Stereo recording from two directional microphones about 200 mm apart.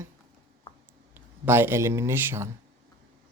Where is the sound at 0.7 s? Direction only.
25° left (ahead or behind).